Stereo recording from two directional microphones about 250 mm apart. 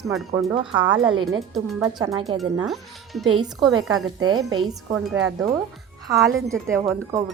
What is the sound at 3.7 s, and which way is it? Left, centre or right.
Speech, right.